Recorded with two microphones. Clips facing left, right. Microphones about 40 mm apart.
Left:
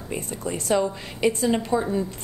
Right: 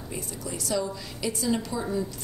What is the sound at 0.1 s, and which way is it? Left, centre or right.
A woman's voice, left.